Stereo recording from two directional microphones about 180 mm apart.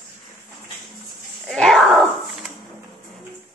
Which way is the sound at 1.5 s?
Centre (ahead or behind).